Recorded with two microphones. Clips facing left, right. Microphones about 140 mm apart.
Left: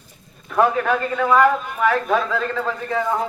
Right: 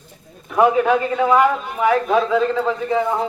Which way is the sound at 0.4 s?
15° right (ahead or behind).